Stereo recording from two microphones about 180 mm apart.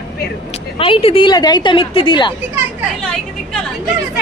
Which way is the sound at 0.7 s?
30° left (ahead or behind).